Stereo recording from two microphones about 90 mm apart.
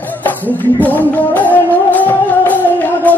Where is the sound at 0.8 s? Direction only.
20° left (ahead or behind).